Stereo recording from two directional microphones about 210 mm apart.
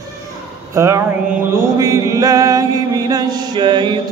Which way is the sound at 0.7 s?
15° right (ahead or behind).